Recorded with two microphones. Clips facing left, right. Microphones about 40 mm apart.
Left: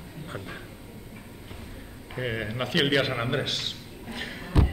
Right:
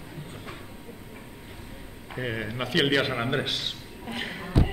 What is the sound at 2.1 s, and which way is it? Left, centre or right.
A man's voice, centre.